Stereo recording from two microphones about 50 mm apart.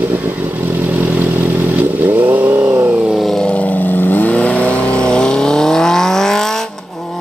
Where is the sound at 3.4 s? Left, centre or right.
Left.